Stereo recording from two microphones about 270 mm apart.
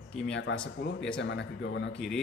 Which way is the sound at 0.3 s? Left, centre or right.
Left.